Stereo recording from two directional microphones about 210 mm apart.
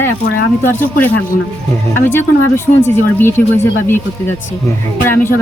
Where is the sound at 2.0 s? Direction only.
10° left (ahead or behind).